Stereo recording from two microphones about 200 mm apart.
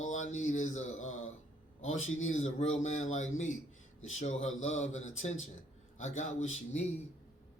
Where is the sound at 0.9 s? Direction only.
85° left.